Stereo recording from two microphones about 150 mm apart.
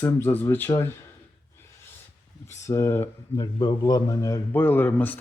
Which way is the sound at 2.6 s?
20° left (ahead or behind).